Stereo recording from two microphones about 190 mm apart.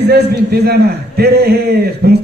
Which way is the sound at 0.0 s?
60° right (ahead or behind).